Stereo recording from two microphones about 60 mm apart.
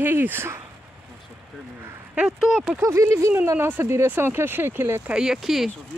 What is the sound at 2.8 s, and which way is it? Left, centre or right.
Speech, right.